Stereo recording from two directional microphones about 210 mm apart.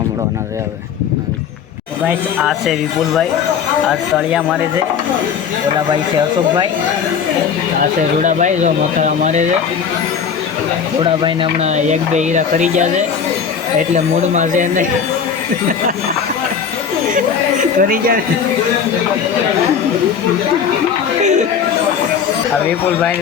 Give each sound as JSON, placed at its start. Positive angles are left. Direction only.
{"t": 2.0, "sound": "speech", "side_deg": 0}
{"t": 3.8, "sound": "speech", "side_deg": 0}
{"t": 7.8, "sound": "speech", "side_deg": -35}
{"t": 11.0, "sound": "speech", "side_deg": -25}
{"t": 13.9, "sound": "speech", "side_deg": -35}
{"t": 17.7, "sound": "speech", "side_deg": -45}